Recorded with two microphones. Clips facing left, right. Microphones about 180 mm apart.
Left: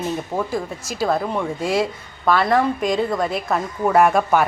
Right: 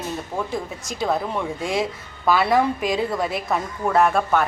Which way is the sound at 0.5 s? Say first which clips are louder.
Left 3 dB; 5° left (ahead or behind).